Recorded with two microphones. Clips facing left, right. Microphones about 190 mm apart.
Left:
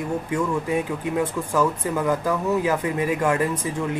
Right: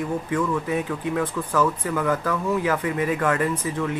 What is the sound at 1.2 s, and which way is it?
Speech, 10° left (ahead or behind).